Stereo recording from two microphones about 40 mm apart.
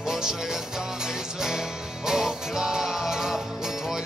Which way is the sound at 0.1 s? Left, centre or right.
Centre.